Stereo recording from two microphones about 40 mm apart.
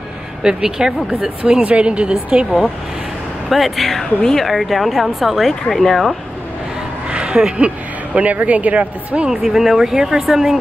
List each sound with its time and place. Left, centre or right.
0.4 s speech: centre
1.6 s a woman's voice: right
3.4 s speech: centre
4.5 s speech: centre
7.1 s a sound: right
7.5 s a woman's voice: right
9.3 s speech: centre